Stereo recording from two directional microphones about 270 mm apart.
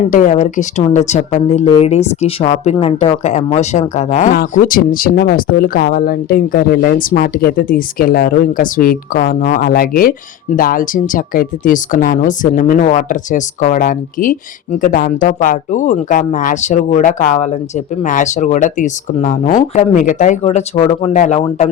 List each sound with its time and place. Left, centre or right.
0.1 s speech: left